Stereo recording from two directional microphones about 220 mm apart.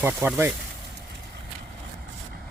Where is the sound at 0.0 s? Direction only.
10° right (ahead or behind).